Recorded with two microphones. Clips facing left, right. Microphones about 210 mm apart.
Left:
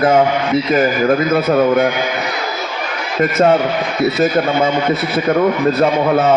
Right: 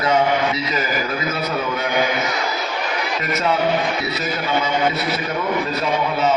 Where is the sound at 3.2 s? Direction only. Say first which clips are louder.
Left 11 dB; 50° left (ahead or behind).